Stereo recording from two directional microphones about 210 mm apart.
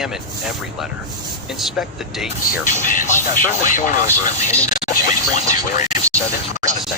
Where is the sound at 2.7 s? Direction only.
40° left (ahead or behind).